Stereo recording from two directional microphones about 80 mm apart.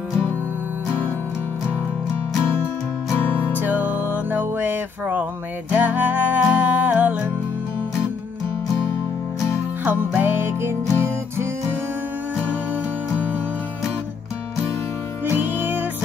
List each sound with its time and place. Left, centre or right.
3.2 s music: left
3.5 s music: right
9.8 s music: right
15.3 s music: right